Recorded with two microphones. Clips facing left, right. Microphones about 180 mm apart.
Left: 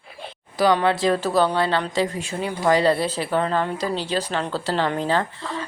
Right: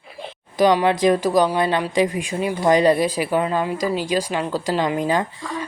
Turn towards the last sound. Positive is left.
turn(degrees=-15)  # may be behind; listen again after turning